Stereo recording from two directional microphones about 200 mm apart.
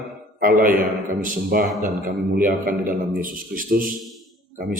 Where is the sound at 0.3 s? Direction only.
45° right (ahead or behind).